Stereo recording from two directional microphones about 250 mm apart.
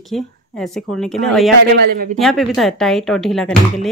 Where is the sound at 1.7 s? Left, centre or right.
Right.